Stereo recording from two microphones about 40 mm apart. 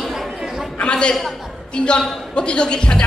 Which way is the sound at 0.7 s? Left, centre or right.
Left.